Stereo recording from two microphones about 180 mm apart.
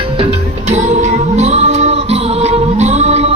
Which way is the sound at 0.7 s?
40° right (ahead or behind).